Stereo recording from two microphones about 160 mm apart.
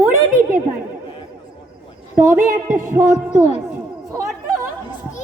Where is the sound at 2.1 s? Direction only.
15° right (ahead or behind).